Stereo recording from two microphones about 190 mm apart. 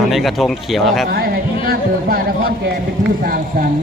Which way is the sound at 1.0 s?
50° right (ahead or behind).